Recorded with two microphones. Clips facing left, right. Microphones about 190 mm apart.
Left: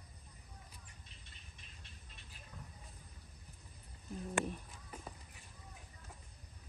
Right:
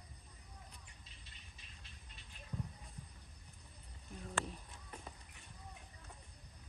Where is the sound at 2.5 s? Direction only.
30° right (ahead or behind).